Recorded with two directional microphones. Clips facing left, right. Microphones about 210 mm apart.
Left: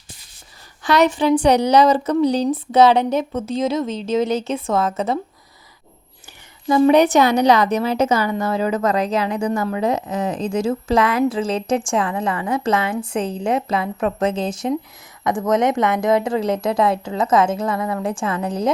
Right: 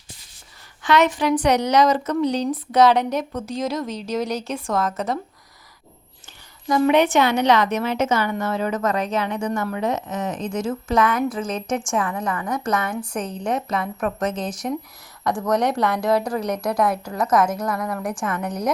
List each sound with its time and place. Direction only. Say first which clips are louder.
0.8 s a woman's voice: left 2 dB; 35° left (ahead or behind)
6.7 s a woman's voice: left 4 dB; 30° left (ahead or behind)